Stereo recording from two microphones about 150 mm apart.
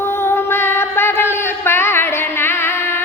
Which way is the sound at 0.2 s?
15° left (ahead or behind).